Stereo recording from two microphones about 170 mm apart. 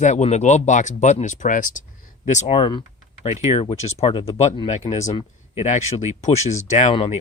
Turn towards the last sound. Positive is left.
turn(degrees=40)  # may be behind; listen again after turning